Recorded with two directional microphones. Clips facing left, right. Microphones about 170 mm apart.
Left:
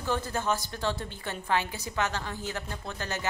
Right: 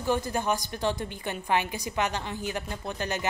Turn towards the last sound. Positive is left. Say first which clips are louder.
# right 4 dB
turn(degrees=-15)  # may be behind; listen again after turning